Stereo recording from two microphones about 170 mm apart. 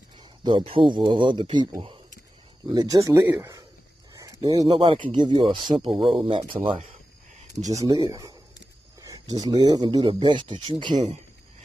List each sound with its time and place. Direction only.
0.2 s speech: 25° right (ahead or behind)
4.1 s a sound: 20° right (ahead or behind)
4.6 s speech: 30° right (ahead or behind)
7.7 s speech: 20° right (ahead or behind)